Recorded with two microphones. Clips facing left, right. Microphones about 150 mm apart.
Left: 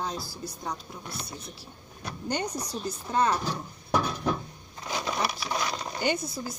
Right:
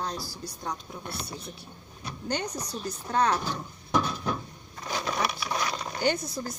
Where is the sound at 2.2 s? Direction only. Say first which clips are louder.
Left 1 dB; 10° left (ahead or behind).